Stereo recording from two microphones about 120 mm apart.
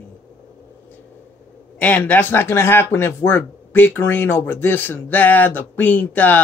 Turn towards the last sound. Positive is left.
turn(degrees=15)  # may be behind; listen again after turning